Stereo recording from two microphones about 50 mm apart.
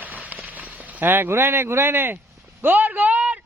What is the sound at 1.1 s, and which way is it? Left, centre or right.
A man's voice, right.